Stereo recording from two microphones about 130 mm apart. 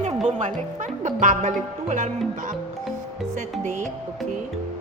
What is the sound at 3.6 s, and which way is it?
Speech, 70° right (ahead or behind).